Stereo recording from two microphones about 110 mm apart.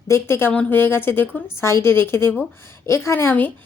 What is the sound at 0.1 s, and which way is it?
A woman's voice, 20° left (ahead or behind).